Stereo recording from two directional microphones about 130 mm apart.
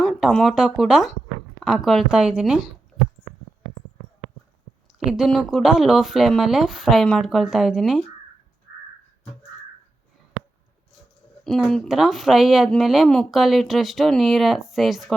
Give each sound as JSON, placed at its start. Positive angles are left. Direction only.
{"t": 0.0, "sound": "speech", "side_deg": 5}
{"t": 4.9, "sound": "speech", "side_deg": -5}
{"t": 11.4, "sound": "speech", "side_deg": 0}